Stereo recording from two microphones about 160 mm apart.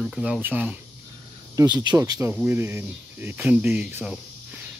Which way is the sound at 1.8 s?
25° right (ahead or behind).